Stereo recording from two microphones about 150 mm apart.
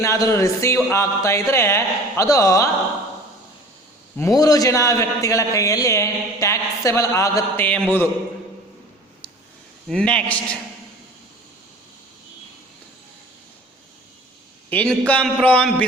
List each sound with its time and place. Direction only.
0.0 s a man's voice: 20° left (ahead or behind)
4.2 s a man's voice: 25° left (ahead or behind)
9.9 s speech: 5° left (ahead or behind)
14.7 s speech: 10° left (ahead or behind)